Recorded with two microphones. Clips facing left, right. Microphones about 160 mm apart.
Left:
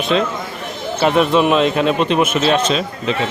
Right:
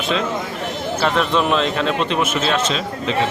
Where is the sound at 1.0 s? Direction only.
10° left (ahead or behind).